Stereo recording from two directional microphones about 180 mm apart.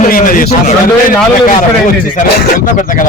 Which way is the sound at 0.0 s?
50° left (ahead or behind).